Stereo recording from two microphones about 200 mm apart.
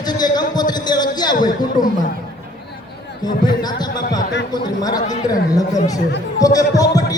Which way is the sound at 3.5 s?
20° left (ahead or behind).